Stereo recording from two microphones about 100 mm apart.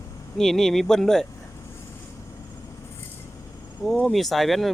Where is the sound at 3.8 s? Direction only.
10° left (ahead or behind).